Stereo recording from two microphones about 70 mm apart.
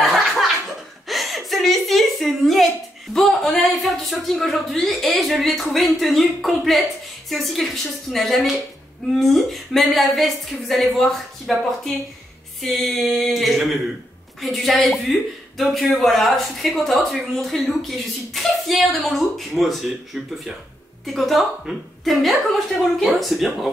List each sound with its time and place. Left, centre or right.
0.0 s laughter: centre
1.0 s a woman's voice: centre
21.0 s a woman's voice: centre